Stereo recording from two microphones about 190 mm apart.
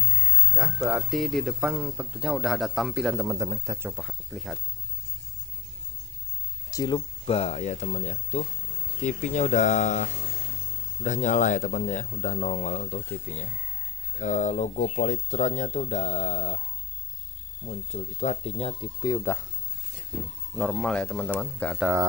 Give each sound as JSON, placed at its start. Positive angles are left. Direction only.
{"t": 0.6, "sound": "speech", "side_deg": -5}
{"t": 3.3, "sound": "speech", "side_deg": -15}
{"t": 4.0, "sound": "speech", "side_deg": 0}
{"t": 6.7, "sound": "a man's voice", "side_deg": 20}
{"t": 17.6, "sound": "speech", "side_deg": 35}
{"t": 20.5, "sound": "speech", "side_deg": 5}